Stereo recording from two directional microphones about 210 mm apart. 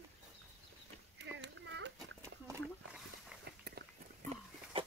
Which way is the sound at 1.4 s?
60° right (ahead or behind).